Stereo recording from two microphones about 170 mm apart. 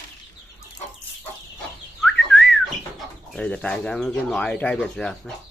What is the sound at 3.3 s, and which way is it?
Speech, 5° left (ahead or behind).